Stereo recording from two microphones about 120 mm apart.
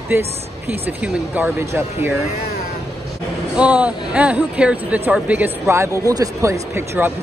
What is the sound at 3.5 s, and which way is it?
Speech, 10° right (ahead or behind).